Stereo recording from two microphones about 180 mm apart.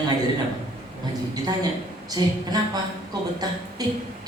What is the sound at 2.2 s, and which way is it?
Speech, 25° right (ahead or behind).